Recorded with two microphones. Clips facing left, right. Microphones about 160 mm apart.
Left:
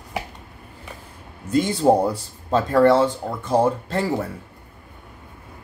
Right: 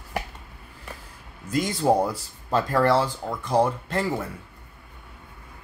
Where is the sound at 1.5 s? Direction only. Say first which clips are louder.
Left 5 dB; 30° left (ahead or behind).